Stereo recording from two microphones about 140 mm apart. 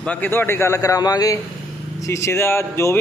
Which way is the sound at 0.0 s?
10° left (ahead or behind).